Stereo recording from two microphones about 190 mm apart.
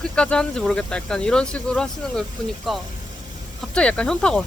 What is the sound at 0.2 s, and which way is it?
Speech, 5° left (ahead or behind).